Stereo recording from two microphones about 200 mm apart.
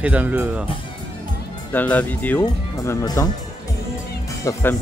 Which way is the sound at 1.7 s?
10° left (ahead or behind).